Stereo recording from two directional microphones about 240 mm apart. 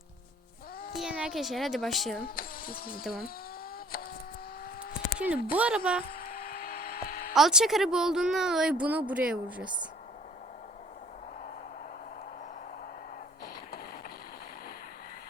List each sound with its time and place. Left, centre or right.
0.9 s a woman's voice: centre
2.3 s speech: left
5.5 s a woman's voice: centre
6.1 s a sound: left
7.3 s a woman's voice: centre